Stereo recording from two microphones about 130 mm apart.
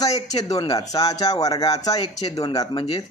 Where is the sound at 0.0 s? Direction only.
30° left (ahead or behind).